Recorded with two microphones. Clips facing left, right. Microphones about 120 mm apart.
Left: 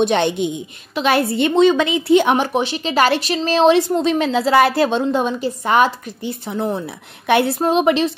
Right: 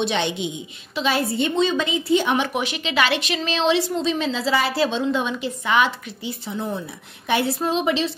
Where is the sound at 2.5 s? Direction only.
35° left (ahead or behind); by 8.1 s 60° left (ahead or behind).